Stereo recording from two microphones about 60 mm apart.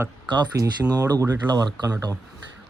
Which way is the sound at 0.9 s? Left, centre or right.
Right.